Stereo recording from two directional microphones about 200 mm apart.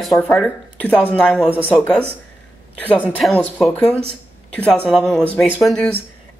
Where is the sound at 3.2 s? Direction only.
5° left (ahead or behind).